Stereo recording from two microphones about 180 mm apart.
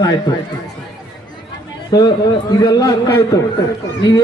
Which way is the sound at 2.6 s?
20° left (ahead or behind).